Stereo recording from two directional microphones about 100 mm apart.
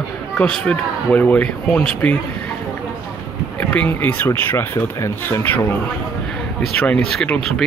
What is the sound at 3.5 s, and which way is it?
Speech, 15° left (ahead or behind).